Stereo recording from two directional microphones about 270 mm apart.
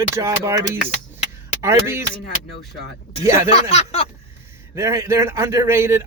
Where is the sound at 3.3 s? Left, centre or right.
Centre.